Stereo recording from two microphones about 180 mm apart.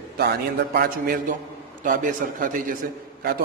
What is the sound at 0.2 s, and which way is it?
A man's voice, 60° right (ahead or behind).